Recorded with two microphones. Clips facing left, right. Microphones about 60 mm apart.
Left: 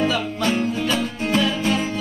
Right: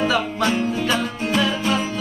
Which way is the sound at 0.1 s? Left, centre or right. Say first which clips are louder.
Right 2 dB; right.